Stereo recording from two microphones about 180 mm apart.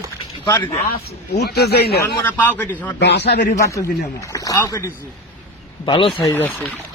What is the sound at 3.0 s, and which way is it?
Speech, 70° left (ahead or behind).